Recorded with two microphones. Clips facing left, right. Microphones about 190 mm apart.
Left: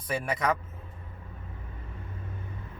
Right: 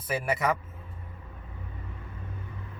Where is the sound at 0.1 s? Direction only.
5° right (ahead or behind).